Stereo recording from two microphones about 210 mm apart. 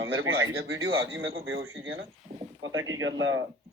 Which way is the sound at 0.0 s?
65° right (ahead or behind).